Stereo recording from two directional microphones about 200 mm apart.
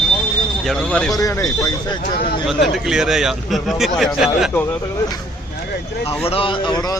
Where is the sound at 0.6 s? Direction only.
5° left (ahead or behind).